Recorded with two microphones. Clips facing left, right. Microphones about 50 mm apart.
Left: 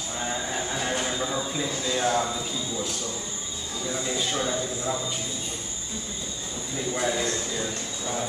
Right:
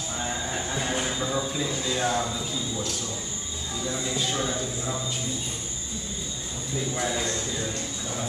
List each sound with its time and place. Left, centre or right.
0.2 s a sound: centre
1.0 s speech: centre
6.9 s a man's voice: centre